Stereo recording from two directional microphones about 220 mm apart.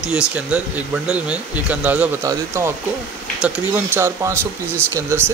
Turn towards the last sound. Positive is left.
turn(degrees=-10)  # may be behind; listen again after turning